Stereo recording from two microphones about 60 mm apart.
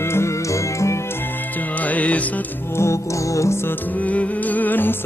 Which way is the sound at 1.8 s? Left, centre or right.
Left.